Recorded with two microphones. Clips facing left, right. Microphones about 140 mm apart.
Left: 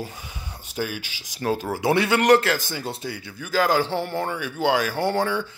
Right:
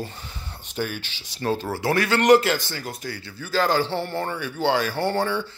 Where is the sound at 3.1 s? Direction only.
15° left (ahead or behind).